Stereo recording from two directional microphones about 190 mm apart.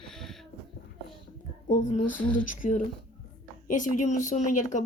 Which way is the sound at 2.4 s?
45° left (ahead or behind).